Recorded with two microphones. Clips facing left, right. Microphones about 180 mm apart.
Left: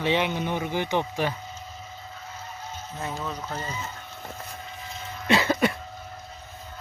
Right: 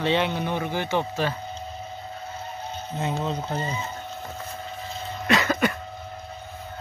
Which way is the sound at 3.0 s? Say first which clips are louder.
Right 5 dB; 25° right (ahead or behind).